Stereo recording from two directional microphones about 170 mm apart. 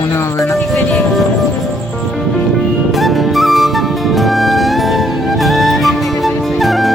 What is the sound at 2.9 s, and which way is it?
Music, centre (ahead or behind).